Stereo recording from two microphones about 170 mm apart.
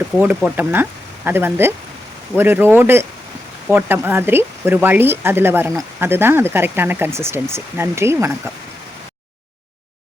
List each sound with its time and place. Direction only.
0.2 s speech: 10° right (ahead or behind)